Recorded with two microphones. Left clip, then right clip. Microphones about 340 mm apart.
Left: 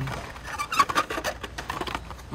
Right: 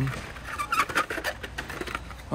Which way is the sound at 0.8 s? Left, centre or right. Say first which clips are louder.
Left 5 dB; left.